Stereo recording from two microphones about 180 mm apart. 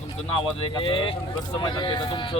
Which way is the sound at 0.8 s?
30° left (ahead or behind).